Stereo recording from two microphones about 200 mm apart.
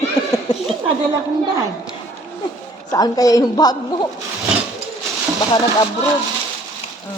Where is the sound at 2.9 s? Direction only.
20° left (ahead or behind).